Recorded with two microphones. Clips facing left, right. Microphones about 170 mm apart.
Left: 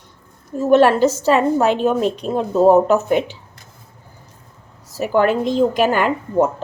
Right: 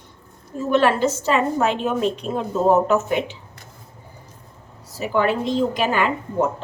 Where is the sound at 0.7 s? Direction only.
40° left (ahead or behind).